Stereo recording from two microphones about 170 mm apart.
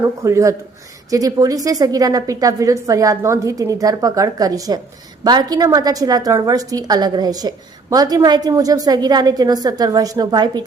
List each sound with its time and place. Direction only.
0.0 s a woman's voice: 15° right (ahead or behind)